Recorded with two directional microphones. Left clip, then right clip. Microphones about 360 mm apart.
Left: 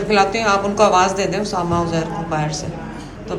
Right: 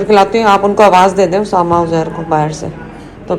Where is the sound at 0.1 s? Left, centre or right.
Centre.